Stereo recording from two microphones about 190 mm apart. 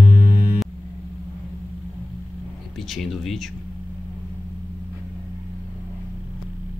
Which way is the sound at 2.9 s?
Centre (ahead or behind).